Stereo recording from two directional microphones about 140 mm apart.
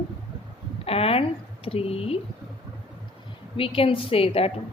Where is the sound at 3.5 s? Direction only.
40° left (ahead or behind).